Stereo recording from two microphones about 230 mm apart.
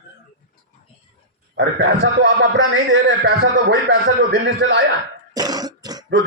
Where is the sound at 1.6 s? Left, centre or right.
Right.